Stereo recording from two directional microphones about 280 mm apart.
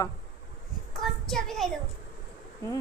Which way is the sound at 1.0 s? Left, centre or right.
Centre.